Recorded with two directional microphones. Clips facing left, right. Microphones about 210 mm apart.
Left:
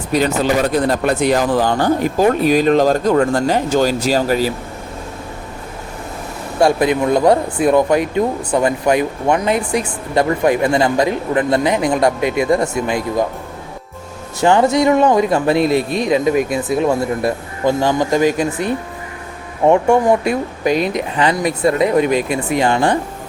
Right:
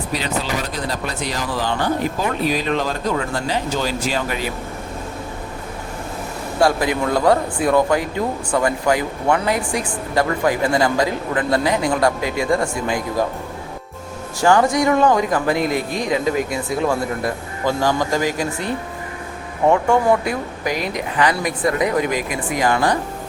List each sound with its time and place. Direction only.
0.1 s speech: 50° left (ahead or behind)
6.6 s speech: 25° left (ahead or behind)
14.4 s speech: 25° left (ahead or behind)